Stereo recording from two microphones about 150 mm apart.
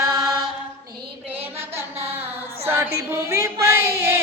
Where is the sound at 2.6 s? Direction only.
15° right (ahead or behind).